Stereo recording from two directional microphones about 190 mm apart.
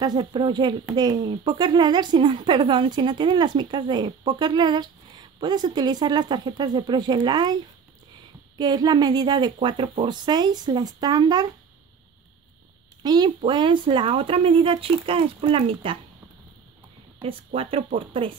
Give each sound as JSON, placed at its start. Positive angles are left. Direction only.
{"t": 0.0, "sound": "speech", "side_deg": -20}
{"t": 8.5, "sound": "speech", "side_deg": -20}
{"t": 13.0, "sound": "speech", "side_deg": -20}
{"t": 17.5, "sound": "speech", "side_deg": -30}